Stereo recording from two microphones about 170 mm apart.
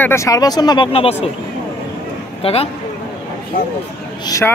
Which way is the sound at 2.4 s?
35° left (ahead or behind).